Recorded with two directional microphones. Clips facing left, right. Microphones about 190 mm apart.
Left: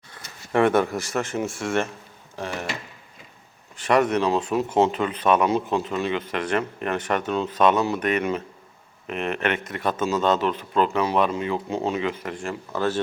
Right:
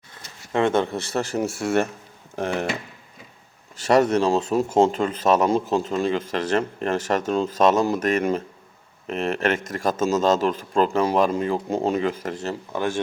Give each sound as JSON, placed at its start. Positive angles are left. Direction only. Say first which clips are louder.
{"t": 0.5, "sound": "speech", "louder": "left 1 dB", "side_deg": -25}
{"t": 3.8, "sound": "speech", "louder": "right 2 dB", "side_deg": -40}
{"t": 12.7, "sound": "speech", "louder": "left 1 dB", "side_deg": -15}